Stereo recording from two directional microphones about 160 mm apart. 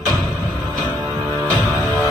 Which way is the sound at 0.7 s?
25° right (ahead or behind).